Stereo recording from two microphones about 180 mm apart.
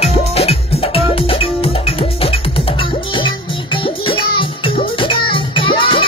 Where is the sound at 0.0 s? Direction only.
35° left (ahead or behind).